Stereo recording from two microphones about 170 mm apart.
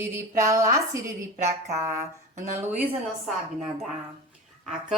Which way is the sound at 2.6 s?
10° right (ahead or behind).